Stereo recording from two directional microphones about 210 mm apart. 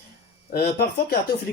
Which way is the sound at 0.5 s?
50° left (ahead or behind).